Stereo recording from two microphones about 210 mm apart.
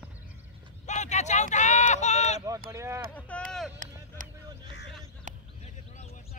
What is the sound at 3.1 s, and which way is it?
Speech, 5° left (ahead or behind).